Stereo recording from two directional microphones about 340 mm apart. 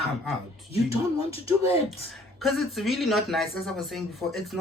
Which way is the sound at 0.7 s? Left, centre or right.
Centre.